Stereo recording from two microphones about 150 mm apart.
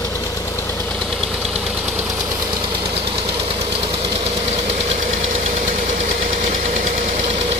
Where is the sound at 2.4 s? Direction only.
35° right (ahead or behind).